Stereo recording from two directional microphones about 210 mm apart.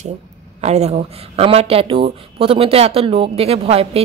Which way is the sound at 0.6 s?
30° right (ahead or behind).